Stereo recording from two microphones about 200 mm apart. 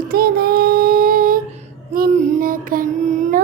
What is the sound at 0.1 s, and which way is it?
Child singing, 50° right (ahead or behind).